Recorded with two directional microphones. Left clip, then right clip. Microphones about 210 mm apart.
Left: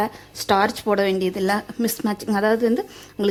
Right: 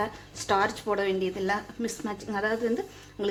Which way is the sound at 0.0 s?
55° left (ahead or behind).